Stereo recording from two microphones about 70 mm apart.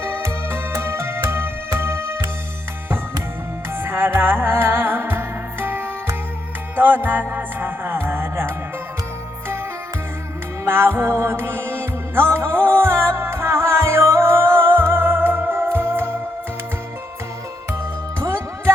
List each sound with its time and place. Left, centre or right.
0.0 s music: right
3.8 s music: right
10.7 s music: right